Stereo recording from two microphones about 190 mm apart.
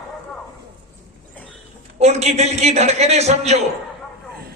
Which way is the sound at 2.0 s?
35° right (ahead or behind).